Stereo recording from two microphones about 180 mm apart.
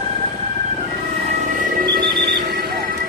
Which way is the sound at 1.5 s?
50° right (ahead or behind).